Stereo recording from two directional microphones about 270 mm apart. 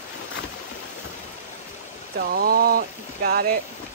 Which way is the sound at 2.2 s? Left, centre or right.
Right.